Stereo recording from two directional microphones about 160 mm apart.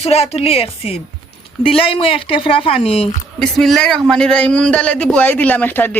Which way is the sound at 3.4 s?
5° left (ahead or behind).